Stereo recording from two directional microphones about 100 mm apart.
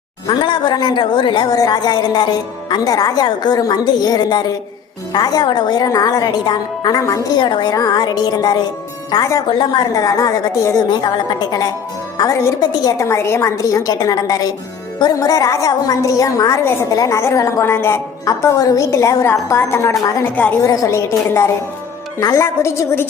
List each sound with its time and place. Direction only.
0.3 s a woman's voice: 50° left (ahead or behind)
1.5 s a woman's voice: 40° left (ahead or behind)
7.0 s a woman's voice: 35° left (ahead or behind)
7.4 s a woman's voice: 50° left (ahead or behind)
9.5 s a woman's voice: 55° left (ahead or behind)
9.9 s a woman's voice: 35° left (ahead or behind)
10.8 s a woman's voice: 45° left (ahead or behind)
13.1 s a woman's voice: 30° left (ahead or behind)
18.3 s a woman's voice: 35° left (ahead or behind)
20.3 s a woman's voice: 15° left (ahead or behind)
20.6 s a woman's voice: 35° left (ahead or behind)
22.2 s a woman's voice: 35° left (ahead or behind)